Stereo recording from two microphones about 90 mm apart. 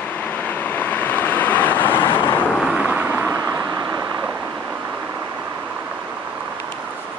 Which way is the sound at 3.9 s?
35° right (ahead or behind).